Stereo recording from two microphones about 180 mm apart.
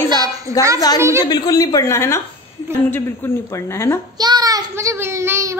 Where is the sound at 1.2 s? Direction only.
25° left (ahead or behind).